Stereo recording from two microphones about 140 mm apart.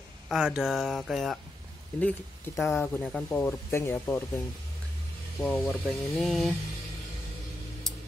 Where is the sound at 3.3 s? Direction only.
20° left (ahead or behind).